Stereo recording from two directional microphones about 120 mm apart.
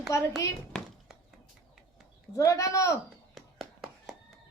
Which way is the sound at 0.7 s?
5° left (ahead or behind).